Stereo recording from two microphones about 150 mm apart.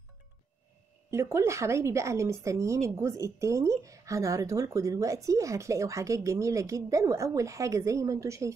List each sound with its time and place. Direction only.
1.1 s a woman's voice: 15° right (ahead or behind)